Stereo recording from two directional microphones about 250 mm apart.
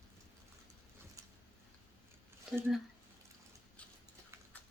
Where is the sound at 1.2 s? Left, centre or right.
Centre.